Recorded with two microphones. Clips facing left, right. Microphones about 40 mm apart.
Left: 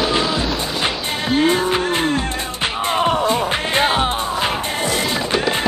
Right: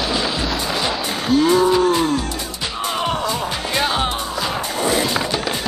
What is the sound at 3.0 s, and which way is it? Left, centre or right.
Music, centre.